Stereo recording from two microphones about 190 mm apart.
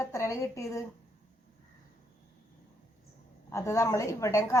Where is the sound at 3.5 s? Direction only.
15° left (ahead or behind).